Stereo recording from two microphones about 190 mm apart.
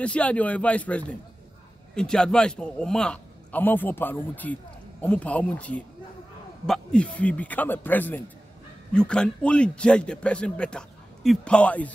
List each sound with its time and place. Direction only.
0.0 s a man's voice: 5° left (ahead or behind)